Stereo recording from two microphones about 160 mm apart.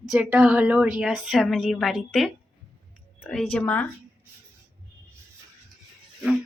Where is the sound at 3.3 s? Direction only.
5° left (ahead or behind).